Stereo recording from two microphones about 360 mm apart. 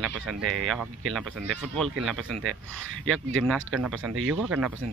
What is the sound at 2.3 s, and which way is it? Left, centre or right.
Speech, right.